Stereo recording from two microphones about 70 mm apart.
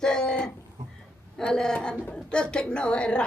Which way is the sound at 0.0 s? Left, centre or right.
Centre.